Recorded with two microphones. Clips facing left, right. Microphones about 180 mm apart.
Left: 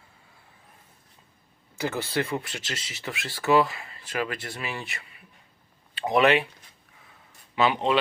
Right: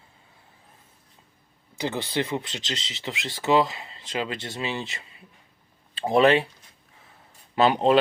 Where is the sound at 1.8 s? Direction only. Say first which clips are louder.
Right 1 dB; 20° right (ahead or behind).